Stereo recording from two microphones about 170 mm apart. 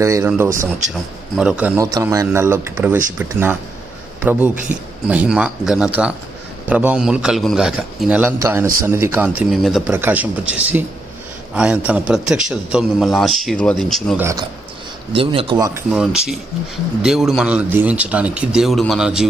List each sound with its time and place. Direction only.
0.0 s speech: 15° right (ahead or behind)
1.3 s speech: 5° right (ahead or behind)
1.8 s a man's voice: 20° right (ahead or behind); by 9.8 s centre (ahead or behind)
9.8 s speech: 10° right (ahead or behind)
14.1 s speech: 15° right (ahead or behind)
15.1 s speech: 30° right (ahead or behind)
15.9 s speech: 5° right (ahead or behind)